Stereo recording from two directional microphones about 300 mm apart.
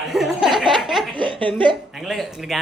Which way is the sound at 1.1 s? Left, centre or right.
Centre.